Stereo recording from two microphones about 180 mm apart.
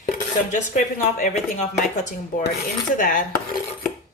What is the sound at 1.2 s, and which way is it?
Speech, 40° left (ahead or behind).